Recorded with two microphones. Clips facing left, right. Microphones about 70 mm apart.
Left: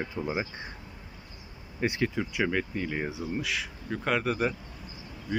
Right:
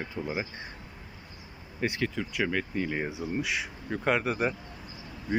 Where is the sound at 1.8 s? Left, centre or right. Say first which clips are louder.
Left 2 dB; centre.